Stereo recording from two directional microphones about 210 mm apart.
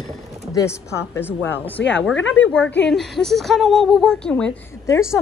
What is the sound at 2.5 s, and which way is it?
A woman's voice, 5° left (ahead or behind).